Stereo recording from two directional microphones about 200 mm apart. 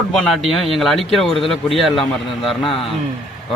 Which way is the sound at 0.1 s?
Centre (ahead or behind).